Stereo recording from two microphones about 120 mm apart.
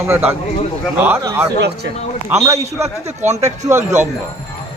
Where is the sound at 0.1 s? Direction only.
15° right (ahead or behind).